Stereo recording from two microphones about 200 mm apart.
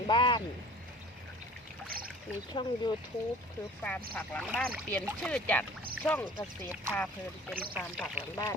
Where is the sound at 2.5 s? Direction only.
20° left (ahead or behind).